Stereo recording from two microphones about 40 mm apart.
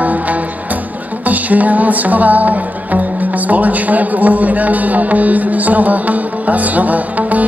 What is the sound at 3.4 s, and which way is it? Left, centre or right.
A man's voice, right.